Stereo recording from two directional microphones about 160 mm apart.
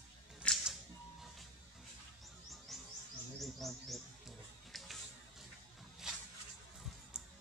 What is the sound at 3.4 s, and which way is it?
Bird, centre (ahead or behind).